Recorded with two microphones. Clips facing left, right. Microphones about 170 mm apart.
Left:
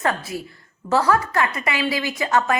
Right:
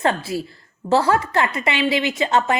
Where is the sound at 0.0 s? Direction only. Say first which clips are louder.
Right 3 dB; 25° right (ahead or behind).